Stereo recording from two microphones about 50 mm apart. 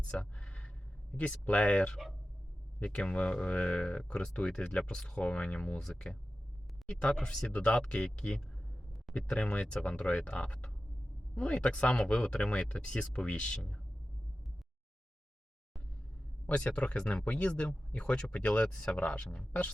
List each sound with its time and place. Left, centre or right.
0.0 s a sound: left
1.1 s speech: left
1.9 s speech: centre
2.7 s speech: left
5.8 s speech: centre
16.6 s speech: centre